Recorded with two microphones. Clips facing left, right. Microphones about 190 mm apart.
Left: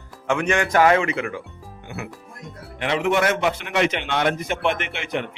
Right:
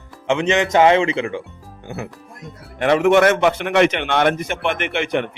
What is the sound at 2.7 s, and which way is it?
A man's voice, 50° right (ahead or behind).